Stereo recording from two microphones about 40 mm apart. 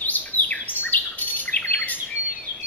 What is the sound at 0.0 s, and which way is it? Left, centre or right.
Chirp, left.